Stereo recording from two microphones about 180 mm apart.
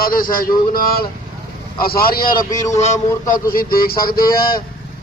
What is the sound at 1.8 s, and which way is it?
Speech, 55° left (ahead or behind).